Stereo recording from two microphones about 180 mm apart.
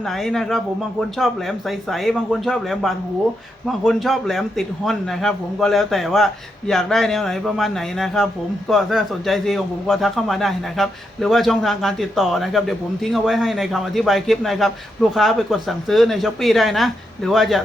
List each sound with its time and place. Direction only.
0.2 s a man's voice: centre (ahead or behind)